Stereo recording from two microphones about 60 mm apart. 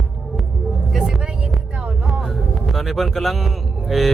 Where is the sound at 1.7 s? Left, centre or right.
Right.